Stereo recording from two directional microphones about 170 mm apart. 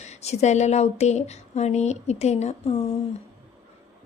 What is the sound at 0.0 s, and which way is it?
Speech, 40° left (ahead or behind).